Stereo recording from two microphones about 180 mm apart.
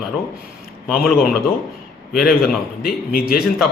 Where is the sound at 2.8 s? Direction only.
60° left (ahead or behind).